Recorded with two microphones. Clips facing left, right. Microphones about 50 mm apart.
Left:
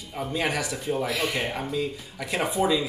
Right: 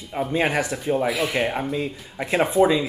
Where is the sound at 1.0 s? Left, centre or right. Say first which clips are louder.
Right 5 dB; centre.